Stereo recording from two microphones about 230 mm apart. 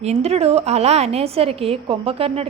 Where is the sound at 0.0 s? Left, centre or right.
Right.